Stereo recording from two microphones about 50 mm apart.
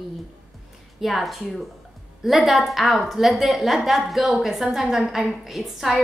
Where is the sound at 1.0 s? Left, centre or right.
Centre.